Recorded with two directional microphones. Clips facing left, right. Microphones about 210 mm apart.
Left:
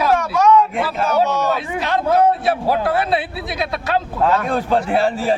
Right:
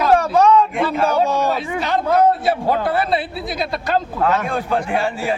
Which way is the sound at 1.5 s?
Centre (ahead or behind).